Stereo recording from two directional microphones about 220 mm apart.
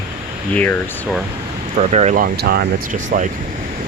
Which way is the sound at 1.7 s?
30° right (ahead or behind).